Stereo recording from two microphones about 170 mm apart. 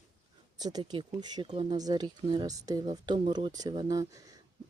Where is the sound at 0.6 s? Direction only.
25° right (ahead or behind).